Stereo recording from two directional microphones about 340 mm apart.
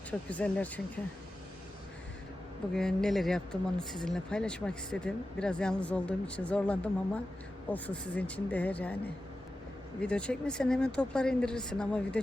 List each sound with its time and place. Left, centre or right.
0.1 s speech: centre
2.7 s speech: centre
10.0 s speech: centre